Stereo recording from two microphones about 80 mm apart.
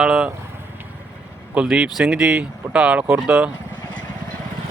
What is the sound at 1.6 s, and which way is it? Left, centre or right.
Speech, centre.